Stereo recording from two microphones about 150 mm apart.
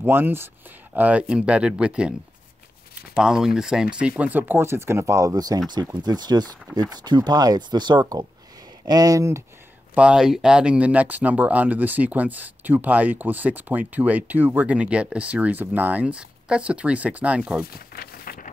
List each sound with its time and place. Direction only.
0.0 s speech: 15° right (ahead or behind)
3.2 s speech: 5° right (ahead or behind); by 9.4 s 20° right (ahead or behind)
9.9 s speech: 5° right (ahead or behind)
17.7 s a sound: 80° left